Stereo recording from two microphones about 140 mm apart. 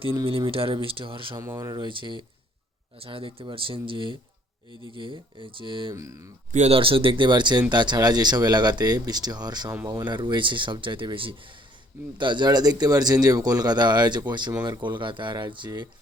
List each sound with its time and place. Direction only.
0.3 s speech: 40° right (ahead or behind)
1.4 s speech: 20° right (ahead or behind)
5.9 s speech: 25° right (ahead or behind)
6.5 s speech: 50° right (ahead or behind); by 15.9 s 30° right (ahead or behind)